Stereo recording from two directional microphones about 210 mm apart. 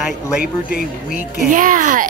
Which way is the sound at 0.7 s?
45° left (ahead or behind).